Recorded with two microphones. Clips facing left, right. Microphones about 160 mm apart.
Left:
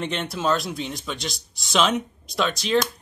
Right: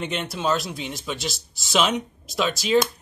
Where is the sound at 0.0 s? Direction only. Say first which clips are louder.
Left 1 dB; centre (ahead or behind).